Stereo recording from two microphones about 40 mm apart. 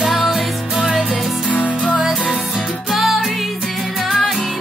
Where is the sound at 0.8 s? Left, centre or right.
Centre.